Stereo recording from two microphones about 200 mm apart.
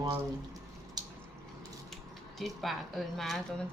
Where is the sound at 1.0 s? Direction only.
20° right (ahead or behind).